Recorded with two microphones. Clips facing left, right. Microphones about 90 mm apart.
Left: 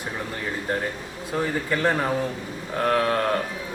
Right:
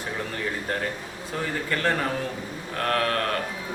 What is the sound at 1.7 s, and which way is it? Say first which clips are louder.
Speech: left 2 dB; 10° left (ahead or behind).